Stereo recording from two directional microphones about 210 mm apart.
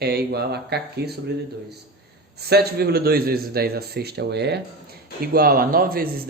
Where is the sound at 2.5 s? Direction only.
50° right (ahead or behind).